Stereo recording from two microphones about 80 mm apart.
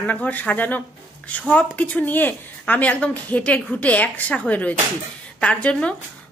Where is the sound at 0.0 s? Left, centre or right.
Left.